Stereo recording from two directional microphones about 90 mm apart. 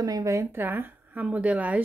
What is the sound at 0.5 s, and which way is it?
Speech, 25° right (ahead or behind).